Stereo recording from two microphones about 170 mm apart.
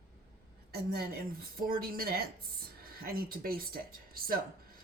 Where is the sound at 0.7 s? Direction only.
65° right (ahead or behind).